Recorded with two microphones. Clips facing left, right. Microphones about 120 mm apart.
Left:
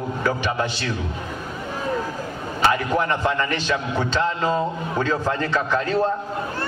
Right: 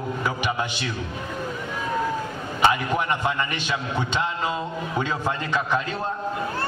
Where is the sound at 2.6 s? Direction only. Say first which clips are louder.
Left 1 dB; 15° right (ahead or behind).